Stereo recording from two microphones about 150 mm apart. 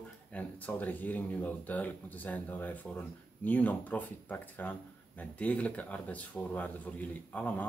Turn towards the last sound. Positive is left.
turn(degrees=10)  # may be behind; listen again after turning